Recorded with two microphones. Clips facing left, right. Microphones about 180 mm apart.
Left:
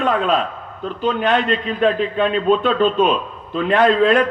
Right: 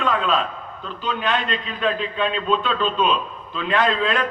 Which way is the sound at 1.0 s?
60° left (ahead or behind).